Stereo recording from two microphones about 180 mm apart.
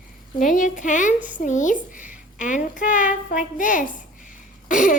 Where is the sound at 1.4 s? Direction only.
45° left (ahead or behind).